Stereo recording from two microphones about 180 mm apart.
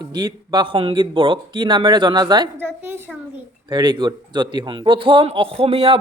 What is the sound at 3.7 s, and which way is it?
Speech, 25° right (ahead or behind).